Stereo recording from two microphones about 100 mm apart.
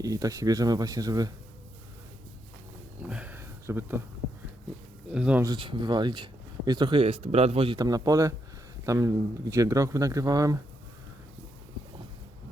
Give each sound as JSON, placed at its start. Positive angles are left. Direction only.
{"t": 0.0, "sound": "speech", "side_deg": -35}
{"t": 3.0, "sound": "a sound", "side_deg": -15}
{"t": 3.7, "sound": "speech", "side_deg": -25}
{"t": 5.1, "sound": "speech", "side_deg": -10}
{"t": 5.5, "sound": "speech", "side_deg": -55}
{"t": 7.0, "sound": "a man's voice", "side_deg": -90}
{"t": 7.8, "sound": "speech", "side_deg": -40}